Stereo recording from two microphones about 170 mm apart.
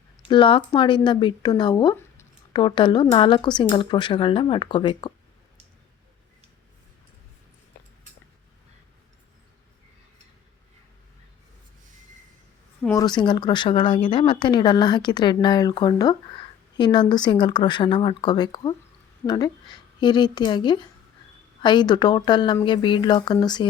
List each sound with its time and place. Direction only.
0.3 s speech: 30° left (ahead or behind)
12.9 s speech: 25° left (ahead or behind)